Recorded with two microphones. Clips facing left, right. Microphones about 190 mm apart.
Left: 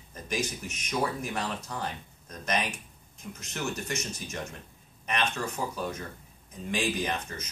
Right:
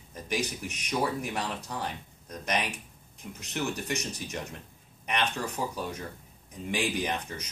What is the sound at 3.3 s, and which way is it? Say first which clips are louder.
Speech: right 2 dB; 15° right (ahead or behind).